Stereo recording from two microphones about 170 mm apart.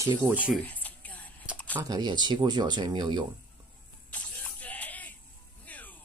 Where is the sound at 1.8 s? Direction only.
25° right (ahead or behind).